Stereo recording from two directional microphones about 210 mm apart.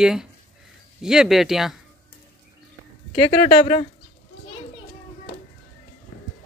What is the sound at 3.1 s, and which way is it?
Speech, 25° left (ahead or behind).